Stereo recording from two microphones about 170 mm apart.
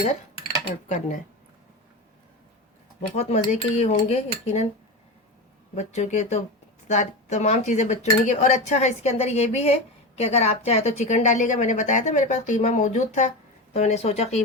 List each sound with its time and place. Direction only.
0.9 s speech: 45° left (ahead or behind)
3.2 s cutlery: 40° left (ahead or behind)
5.7 s speech: 45° left (ahead or behind)
13.7 s cutlery: 40° left (ahead or behind)